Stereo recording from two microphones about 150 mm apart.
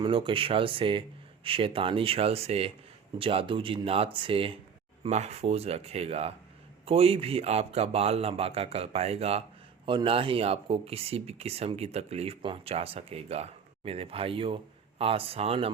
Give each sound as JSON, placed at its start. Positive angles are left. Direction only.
{"t": 0.0, "sound": "speech", "side_deg": -35}